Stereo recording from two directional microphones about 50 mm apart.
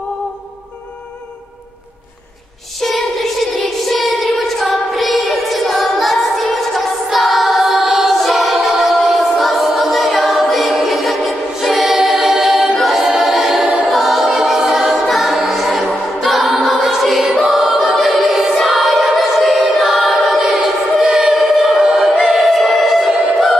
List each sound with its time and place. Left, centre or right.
2.8 s a sound: centre
13.8 s choir: centre
21.8 s choir: centre
22.3 s music: centre